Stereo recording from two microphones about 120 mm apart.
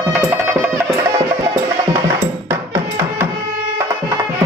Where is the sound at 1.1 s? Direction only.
30° right (ahead or behind).